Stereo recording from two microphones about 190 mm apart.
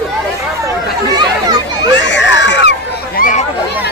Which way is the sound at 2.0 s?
70° left (ahead or behind).